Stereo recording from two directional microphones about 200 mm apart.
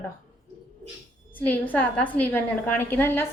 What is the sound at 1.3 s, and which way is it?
A woman's voice, 10° left (ahead or behind).